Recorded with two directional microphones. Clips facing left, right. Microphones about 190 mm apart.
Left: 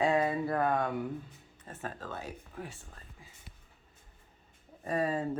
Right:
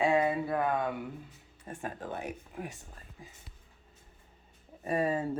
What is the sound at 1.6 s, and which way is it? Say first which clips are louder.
Speech: right 2 dB; 15° right (ahead or behind).